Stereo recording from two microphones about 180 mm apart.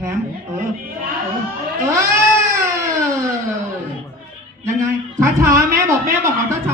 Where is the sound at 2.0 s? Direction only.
15° right (ahead or behind).